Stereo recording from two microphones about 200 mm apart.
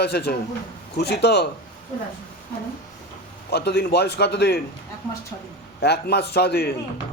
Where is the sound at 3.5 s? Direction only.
55° left (ahead or behind).